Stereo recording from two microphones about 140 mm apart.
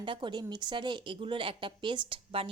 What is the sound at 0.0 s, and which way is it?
Speech, 35° right (ahead or behind).